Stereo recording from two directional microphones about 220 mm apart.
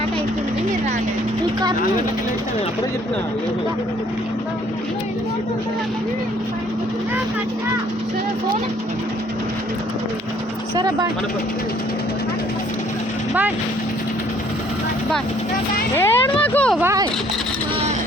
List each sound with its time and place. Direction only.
10.8 s speech: 20° right (ahead or behind)
16.0 s speech: 10° left (ahead or behind)
16.8 s speech: 15° right (ahead or behind)